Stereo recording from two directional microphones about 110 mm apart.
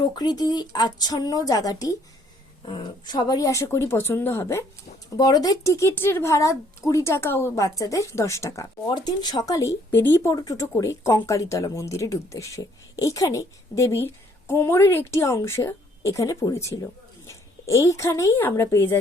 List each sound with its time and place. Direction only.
0.0 s speech: 40° left (ahead or behind)
2.6 s speech: 45° left (ahead or behind); by 4.6 s 25° left (ahead or behind)
5.1 s speech: 35° left (ahead or behind)
8.9 s a woman's voice: 40° left (ahead or behind); by 18.9 s 20° left (ahead or behind)